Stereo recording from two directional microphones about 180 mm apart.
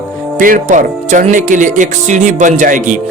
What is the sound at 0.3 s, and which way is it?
Speech, 50° right (ahead or behind).